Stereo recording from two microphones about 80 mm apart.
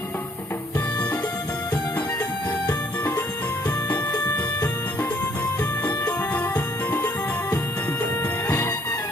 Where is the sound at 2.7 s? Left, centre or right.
Left.